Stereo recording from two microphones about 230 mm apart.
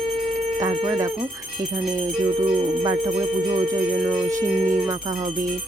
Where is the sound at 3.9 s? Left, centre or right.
Centre.